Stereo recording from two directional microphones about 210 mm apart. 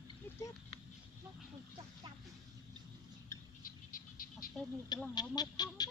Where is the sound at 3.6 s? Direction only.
40° left (ahead or behind).